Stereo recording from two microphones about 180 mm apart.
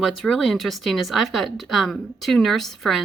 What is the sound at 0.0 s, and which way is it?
Speech, centre (ahead or behind).